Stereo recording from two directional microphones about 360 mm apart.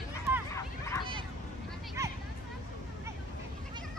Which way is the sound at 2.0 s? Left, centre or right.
Centre.